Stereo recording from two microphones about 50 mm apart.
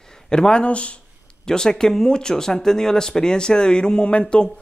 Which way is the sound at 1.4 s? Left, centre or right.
Centre.